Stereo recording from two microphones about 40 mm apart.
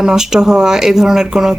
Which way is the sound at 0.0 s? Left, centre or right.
Centre.